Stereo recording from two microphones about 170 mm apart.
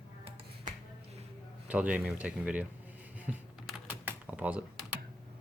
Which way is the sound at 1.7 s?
5° right (ahead or behind).